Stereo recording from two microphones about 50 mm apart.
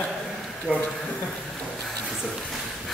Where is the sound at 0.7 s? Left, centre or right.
Right.